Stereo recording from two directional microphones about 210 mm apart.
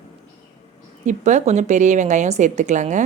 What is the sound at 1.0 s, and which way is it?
Speech, 35° right (ahead or behind).